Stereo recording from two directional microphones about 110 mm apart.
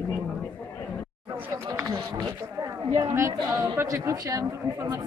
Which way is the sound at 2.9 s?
30° right (ahead or behind).